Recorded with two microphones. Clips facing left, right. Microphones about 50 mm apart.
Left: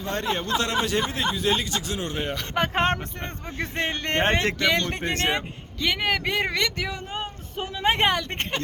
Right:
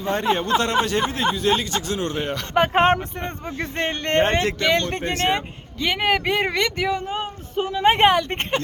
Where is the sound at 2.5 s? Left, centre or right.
Centre.